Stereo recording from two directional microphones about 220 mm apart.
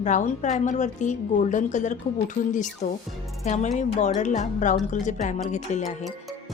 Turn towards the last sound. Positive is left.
turn(degrees=35)  # may be behind; listen again after turning